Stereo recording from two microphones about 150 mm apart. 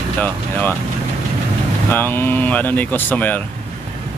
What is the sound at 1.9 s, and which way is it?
Speech, 15° left (ahead or behind).